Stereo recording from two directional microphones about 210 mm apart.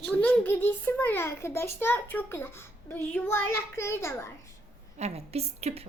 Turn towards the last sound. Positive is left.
turn(degrees=-30)  # may be behind; listen again after turning